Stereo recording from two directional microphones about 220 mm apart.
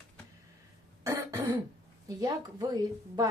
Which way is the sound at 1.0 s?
15° right (ahead or behind).